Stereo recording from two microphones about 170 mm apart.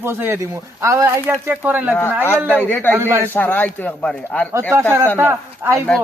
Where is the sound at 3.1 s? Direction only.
15° right (ahead or behind).